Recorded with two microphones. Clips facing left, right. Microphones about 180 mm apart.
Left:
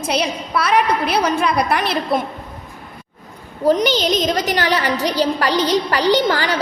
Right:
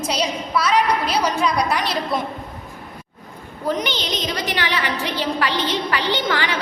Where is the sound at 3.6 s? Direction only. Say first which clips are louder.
Left 8 dB; 35° left (ahead or behind).